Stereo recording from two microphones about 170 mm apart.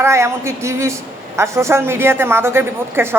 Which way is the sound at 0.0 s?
15° right (ahead or behind).